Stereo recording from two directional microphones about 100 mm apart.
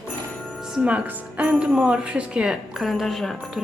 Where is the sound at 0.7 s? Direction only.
15° right (ahead or behind); by 3.6 s 5° left (ahead or behind).